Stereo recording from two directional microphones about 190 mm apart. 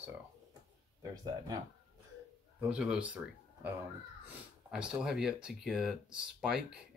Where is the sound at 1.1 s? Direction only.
20° right (ahead or behind).